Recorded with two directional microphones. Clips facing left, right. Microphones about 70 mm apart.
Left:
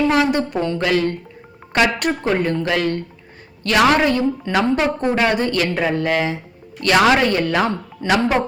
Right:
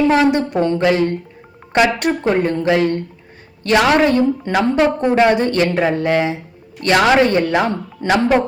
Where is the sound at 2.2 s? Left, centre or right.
Right.